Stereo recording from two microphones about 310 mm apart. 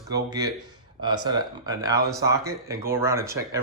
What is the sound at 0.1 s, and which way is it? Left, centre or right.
Speech, centre.